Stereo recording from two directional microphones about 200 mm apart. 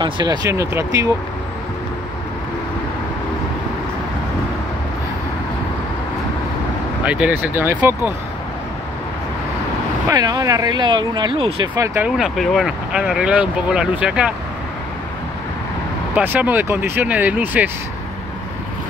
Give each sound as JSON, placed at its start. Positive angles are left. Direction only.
{"t": 0.0, "sound": "speech", "side_deg": -20}
{"t": 7.1, "sound": "speech", "side_deg": -5}
{"t": 10.0, "sound": "speech", "side_deg": -20}
{"t": 11.8, "sound": "speech", "side_deg": -15}
{"t": 12.2, "sound": "speech", "side_deg": 0}
{"t": 16.2, "sound": "speech", "side_deg": -10}